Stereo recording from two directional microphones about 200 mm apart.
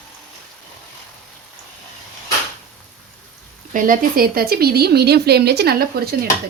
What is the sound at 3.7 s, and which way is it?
A woman's voice, 40° right (ahead or behind).